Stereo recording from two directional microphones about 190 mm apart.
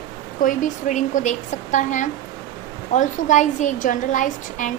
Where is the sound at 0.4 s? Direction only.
45° left (ahead or behind).